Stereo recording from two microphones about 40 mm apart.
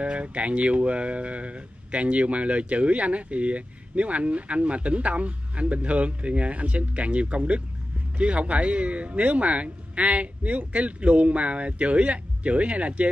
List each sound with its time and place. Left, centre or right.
0.0 s speech: right